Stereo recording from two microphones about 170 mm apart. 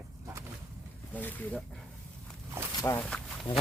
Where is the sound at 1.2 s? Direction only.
10° left (ahead or behind).